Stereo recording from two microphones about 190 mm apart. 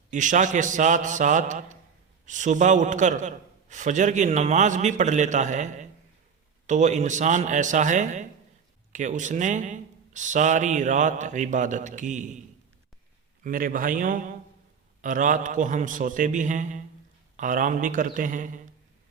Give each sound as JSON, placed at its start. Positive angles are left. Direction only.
{"t": 0.1, "sound": "a man's voice", "side_deg": -40}
{"t": 13.4, "sound": "a man's voice", "side_deg": -45}